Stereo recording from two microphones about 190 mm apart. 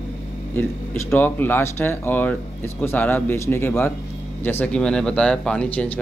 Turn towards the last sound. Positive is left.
turn(degrees=5)  # may be behind; listen again after turning